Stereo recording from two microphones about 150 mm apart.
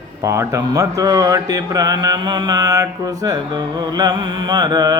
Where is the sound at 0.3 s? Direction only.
20° right (ahead or behind).